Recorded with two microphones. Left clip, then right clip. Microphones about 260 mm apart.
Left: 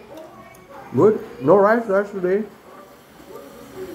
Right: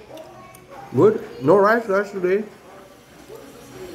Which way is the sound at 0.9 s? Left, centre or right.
Centre.